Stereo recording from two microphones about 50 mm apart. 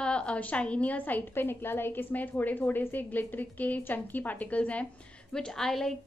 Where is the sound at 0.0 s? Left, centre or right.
Left.